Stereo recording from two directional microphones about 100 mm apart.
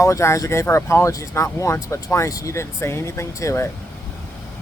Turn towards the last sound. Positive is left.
turn(degrees=30)  # may be behind; listen again after turning